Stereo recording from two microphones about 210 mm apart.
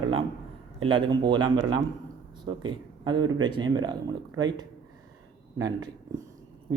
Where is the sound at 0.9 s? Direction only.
20° right (ahead or behind).